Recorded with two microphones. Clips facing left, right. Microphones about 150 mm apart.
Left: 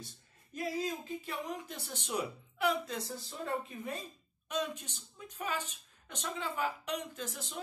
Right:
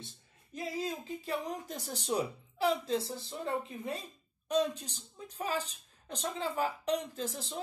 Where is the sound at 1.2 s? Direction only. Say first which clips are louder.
Right 3 dB; 35° right (ahead or behind).